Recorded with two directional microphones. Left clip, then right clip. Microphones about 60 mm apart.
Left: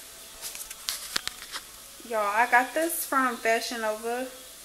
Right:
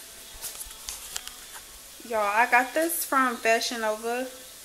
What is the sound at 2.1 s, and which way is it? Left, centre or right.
Speech, right.